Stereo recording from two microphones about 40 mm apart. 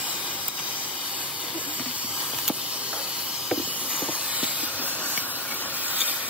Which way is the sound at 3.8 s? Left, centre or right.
Centre.